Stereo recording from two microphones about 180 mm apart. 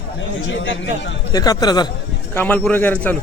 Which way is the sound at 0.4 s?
90° left.